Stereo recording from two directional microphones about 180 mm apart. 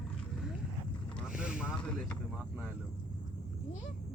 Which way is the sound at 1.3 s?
5° right (ahead or behind).